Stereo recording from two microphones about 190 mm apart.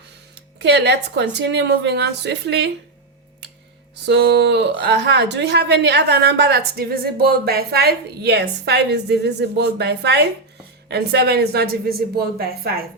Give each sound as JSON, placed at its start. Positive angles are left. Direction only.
{"t": 0.3, "sound": "a woman's voice", "side_deg": -65}
{"t": 4.0, "sound": "a woman's voice", "side_deg": -60}